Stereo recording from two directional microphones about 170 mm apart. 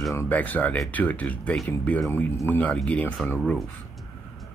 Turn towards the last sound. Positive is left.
turn(degrees=5)  # may be behind; listen again after turning